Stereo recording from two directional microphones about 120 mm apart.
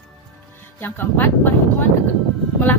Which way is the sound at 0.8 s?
15° left (ahead or behind).